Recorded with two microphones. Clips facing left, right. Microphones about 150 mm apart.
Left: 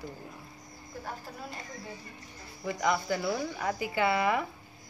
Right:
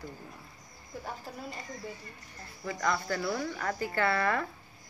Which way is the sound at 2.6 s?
15° left (ahead or behind).